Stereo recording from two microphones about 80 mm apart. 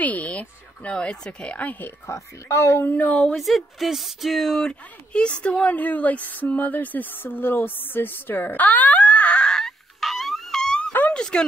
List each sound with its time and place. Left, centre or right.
0.0 s speech: centre
2.0 s speech: left; by 3.3 s centre
3.3 s speech: centre
10.9 s a sound: left
11.1 s speech: centre